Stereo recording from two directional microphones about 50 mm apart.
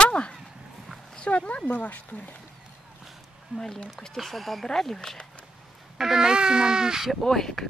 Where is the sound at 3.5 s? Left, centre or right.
Centre.